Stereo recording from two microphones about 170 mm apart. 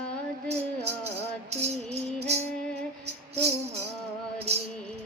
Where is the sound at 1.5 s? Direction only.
40° right (ahead or behind).